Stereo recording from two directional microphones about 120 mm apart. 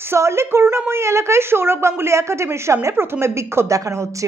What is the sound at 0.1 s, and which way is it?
A woman's voice, 20° right (ahead or behind).